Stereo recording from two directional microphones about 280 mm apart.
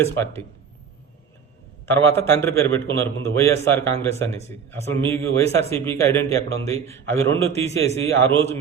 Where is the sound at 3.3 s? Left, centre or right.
Centre.